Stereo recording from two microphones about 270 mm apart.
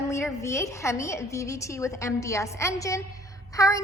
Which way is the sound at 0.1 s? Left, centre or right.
Centre.